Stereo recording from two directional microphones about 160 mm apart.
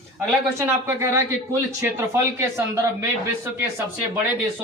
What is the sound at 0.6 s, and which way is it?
A man's voice, 15° right (ahead or behind).